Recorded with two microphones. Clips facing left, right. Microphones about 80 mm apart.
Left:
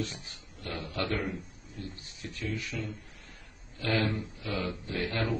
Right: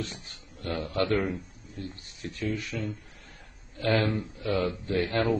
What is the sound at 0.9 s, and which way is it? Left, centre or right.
A man's voice, centre.